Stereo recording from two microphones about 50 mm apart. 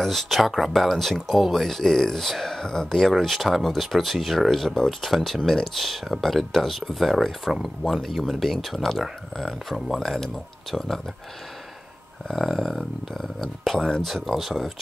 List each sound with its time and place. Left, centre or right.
0.0 s speech: centre
12.3 s speech: centre
14.0 s speech: centre